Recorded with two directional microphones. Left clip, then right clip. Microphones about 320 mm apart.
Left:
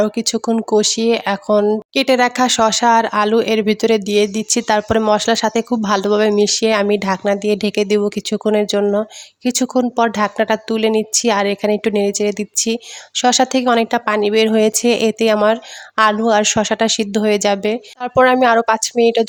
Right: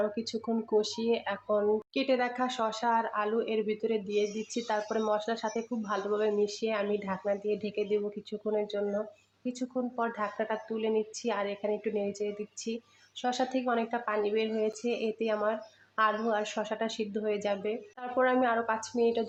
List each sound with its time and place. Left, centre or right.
0.0 s speech: left